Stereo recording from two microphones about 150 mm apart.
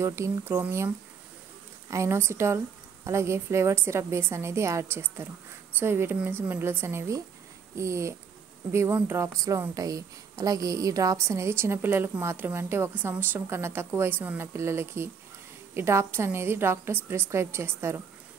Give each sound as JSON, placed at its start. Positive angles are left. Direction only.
{"t": 0.0, "sound": "a woman's voice", "side_deg": -20}